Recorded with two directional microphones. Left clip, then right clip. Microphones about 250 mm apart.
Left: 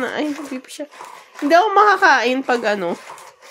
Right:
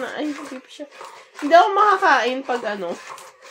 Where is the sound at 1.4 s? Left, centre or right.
Left.